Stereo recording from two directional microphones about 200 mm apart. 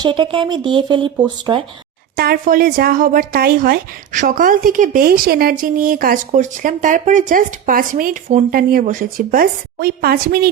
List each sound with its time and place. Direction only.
0.0 s speech: 25° right (ahead or behind)
2.1 s speech: 50° right (ahead or behind)